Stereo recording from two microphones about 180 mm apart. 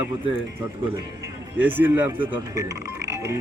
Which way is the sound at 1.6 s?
10° right (ahead or behind).